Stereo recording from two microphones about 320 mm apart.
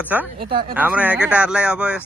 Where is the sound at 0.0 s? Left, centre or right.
Centre.